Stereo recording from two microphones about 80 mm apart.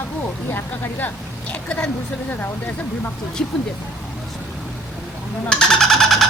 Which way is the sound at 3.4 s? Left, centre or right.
Centre.